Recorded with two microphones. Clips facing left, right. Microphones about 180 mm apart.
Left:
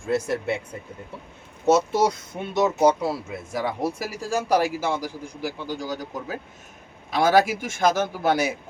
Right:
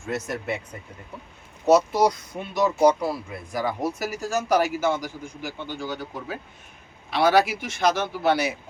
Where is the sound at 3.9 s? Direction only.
30° left (ahead or behind).